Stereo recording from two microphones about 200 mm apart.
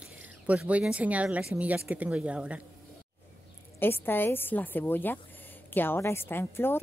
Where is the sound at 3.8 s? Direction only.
10° left (ahead or behind).